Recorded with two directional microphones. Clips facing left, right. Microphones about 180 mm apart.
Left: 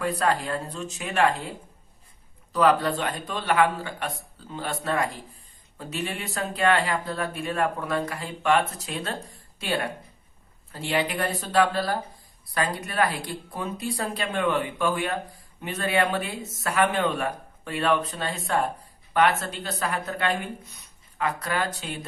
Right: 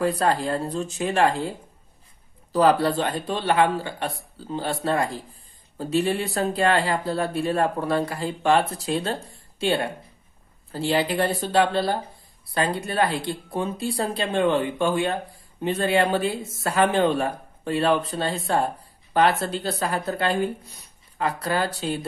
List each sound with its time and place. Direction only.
0.0 s speech: 35° right (ahead or behind)
2.5 s speech: 35° right (ahead or behind)